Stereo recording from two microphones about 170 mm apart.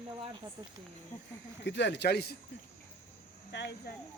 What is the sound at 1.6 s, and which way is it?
Speech, 90° left.